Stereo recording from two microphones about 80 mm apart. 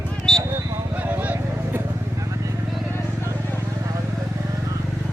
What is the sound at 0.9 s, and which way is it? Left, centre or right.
Vehicle, right.